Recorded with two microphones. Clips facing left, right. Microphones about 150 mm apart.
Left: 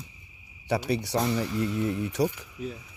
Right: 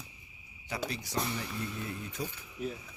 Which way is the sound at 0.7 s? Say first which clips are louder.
Left 9 dB; 70° left (ahead or behind).